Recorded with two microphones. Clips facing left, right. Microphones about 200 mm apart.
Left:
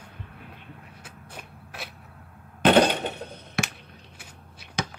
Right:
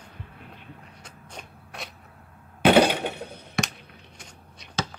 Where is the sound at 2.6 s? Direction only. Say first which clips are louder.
Right 1 dB; 10° right (ahead or behind).